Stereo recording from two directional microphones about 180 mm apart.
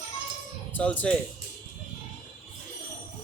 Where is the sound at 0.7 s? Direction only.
10° left (ahead or behind).